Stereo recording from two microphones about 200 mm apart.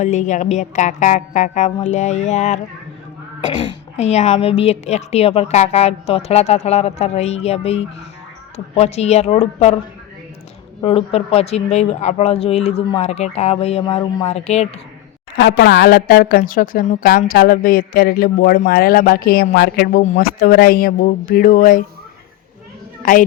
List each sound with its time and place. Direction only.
0.0 s a woman's voice: 35° left (ahead or behind)
10.8 s a woman's voice: 30° left (ahead or behind)
15.4 s a woman's voice: 55° left (ahead or behind); by 21.8 s 40° left (ahead or behind)